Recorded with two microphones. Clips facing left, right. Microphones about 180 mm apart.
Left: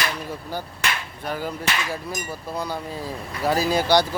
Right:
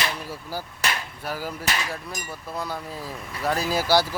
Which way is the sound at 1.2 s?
5° right (ahead or behind).